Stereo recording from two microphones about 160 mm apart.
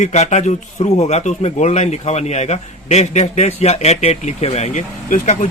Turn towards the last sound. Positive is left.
turn(degrees=50)  # may be behind; listen again after turning